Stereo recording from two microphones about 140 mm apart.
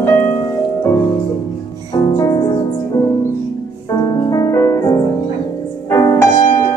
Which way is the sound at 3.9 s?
35° left (ahead or behind).